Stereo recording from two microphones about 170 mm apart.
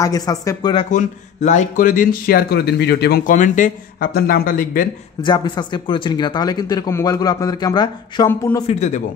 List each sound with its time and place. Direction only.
0.0 s a man's voice: 20° left (ahead or behind)
0.9 s speech: 45° left (ahead or behind); by 3.3 s 70° left (ahead or behind)
3.3 s speech: 50° left (ahead or behind)
5.2 s a man's voice: 25° left (ahead or behind)
8.6 s speech: 40° left (ahead or behind)